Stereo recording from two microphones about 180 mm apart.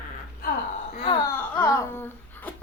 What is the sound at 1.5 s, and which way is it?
Speech, 20° left (ahead or behind).